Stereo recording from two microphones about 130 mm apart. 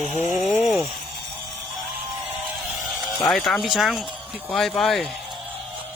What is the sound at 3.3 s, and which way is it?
Speech, centre (ahead or behind).